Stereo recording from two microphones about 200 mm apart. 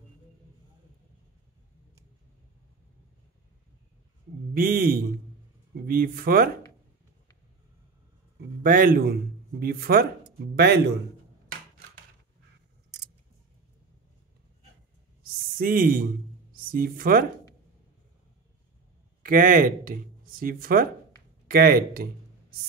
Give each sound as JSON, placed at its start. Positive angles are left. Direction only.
{"t": 4.6, "sound": "speech", "side_deg": -45}
{"t": 8.6, "sound": "a man's voice", "side_deg": -45}
{"t": 15.5, "sound": "speech", "side_deg": -45}
{"t": 19.2, "sound": "speech", "side_deg": -45}